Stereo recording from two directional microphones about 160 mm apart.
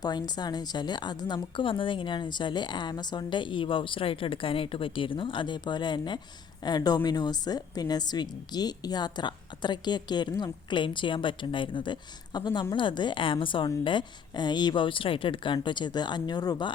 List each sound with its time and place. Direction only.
0.0 s a woman's voice: 25° left (ahead or behind)